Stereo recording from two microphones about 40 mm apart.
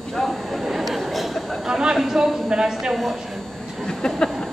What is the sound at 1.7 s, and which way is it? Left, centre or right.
Speech, centre.